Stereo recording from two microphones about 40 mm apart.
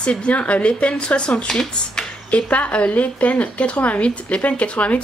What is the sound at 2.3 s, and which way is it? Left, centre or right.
Speech, left.